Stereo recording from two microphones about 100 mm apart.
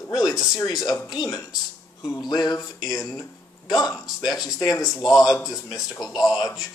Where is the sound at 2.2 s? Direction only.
40° left (ahead or behind).